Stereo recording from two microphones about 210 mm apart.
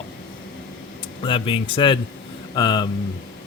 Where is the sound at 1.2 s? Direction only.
25° left (ahead or behind).